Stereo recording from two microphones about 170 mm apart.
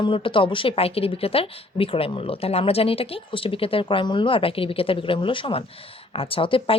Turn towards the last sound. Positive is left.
turn(degrees=30)  # may be behind; listen again after turning